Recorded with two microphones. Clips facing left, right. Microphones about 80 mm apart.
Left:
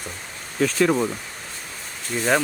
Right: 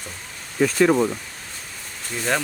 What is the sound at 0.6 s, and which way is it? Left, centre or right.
Speech, centre.